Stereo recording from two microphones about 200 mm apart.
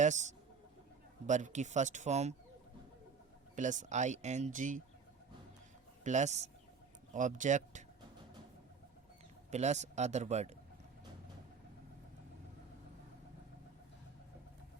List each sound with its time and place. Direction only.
0.0 s speech: 35° right (ahead or behind)
3.5 s speech: 40° right (ahead or behind)
6.1 s speech: 35° right (ahead or behind)
9.5 s speech: 35° right (ahead or behind)